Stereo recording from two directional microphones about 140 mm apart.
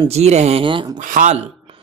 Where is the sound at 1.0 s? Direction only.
65° right (ahead or behind).